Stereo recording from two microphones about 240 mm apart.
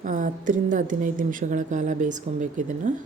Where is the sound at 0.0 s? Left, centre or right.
Right.